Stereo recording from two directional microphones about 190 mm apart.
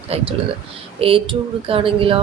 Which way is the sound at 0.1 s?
30° right (ahead or behind).